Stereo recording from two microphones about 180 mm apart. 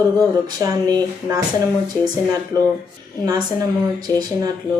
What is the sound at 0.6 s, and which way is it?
Speech, 20° right (ahead or behind).